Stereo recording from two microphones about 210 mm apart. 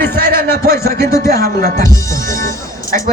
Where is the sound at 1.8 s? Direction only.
15° left (ahead or behind).